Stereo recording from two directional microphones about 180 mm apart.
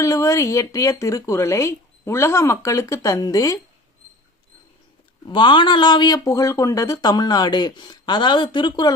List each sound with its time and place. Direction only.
0.0 s speech: 15° left (ahead or behind)
5.2 s speech: 25° left (ahead or behind)